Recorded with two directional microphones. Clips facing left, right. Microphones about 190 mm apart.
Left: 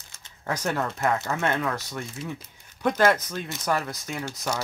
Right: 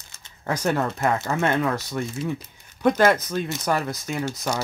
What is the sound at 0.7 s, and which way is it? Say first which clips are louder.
Speech: right 1 dB; 25° right (ahead or behind).